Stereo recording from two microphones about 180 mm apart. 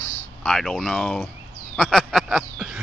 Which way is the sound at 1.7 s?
Centre (ahead or behind).